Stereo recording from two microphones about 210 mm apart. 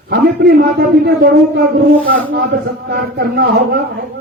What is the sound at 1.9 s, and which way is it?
Speech, 70° right (ahead or behind).